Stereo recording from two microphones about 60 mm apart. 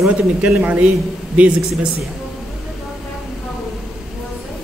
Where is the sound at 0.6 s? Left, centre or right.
Right.